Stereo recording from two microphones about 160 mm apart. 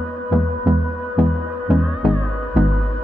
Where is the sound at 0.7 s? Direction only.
Centre (ahead or behind).